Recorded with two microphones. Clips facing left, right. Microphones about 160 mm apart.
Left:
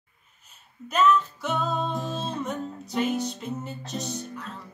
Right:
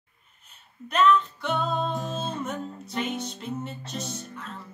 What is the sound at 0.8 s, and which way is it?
Music, centre (ahead or behind).